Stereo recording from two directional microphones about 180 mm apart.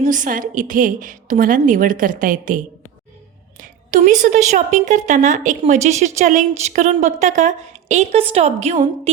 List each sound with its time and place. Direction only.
0.0 s a woman's voice: 45° right (ahead or behind)
3.6 s a sound: 50° right (ahead or behind)
4.2 s a woman's voice: 40° right (ahead or behind)